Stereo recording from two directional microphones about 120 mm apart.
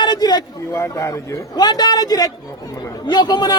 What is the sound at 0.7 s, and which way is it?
A man's voice, 25° left (ahead or behind).